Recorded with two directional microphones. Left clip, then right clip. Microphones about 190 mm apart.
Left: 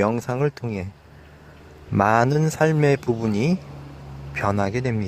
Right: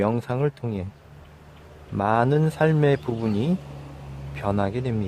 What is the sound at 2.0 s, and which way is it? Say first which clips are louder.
Speech: left 3 dB; 15° left (ahead or behind).